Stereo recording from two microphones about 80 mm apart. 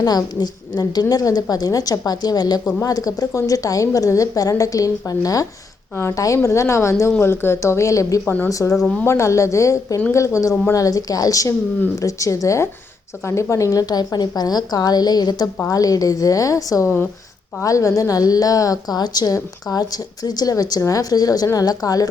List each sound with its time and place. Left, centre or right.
0.0 s a woman's voice: left